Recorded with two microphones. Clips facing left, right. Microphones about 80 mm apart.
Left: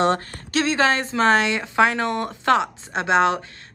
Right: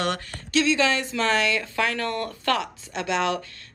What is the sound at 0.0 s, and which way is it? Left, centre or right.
Speech, left.